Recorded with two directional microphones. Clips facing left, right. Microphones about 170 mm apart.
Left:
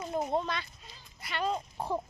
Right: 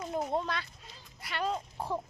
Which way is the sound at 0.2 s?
10° left (ahead or behind).